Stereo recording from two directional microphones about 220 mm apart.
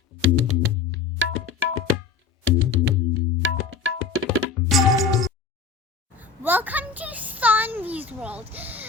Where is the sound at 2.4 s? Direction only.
60° right (ahead or behind).